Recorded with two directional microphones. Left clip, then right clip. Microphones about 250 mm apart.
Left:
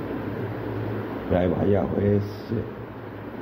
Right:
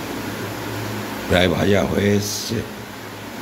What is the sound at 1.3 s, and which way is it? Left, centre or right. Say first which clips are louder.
Speech: right 6 dB; right.